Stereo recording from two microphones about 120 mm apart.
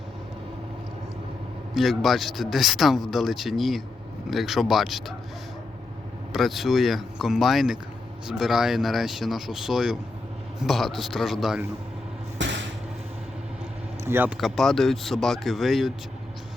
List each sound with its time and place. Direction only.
1.7 s speech: centre (ahead or behind)
6.3 s speech: centre (ahead or behind)
14.0 s speech: 15° right (ahead or behind)
14.3 s speech: centre (ahead or behind)